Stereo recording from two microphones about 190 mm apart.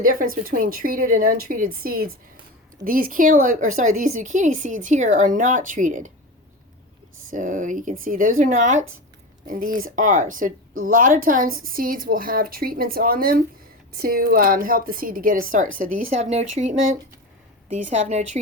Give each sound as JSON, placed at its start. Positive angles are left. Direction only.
{"t": 0.0, "sound": "a woman's voice", "side_deg": -50}
{"t": 7.3, "sound": "a woman's voice", "side_deg": -45}